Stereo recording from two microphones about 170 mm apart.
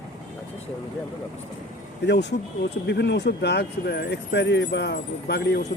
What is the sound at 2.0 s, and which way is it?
Speech, 85° left.